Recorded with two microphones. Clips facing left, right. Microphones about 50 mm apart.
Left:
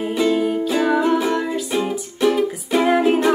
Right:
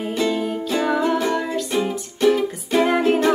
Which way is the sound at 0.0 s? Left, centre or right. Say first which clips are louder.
Left 3 dB; centre.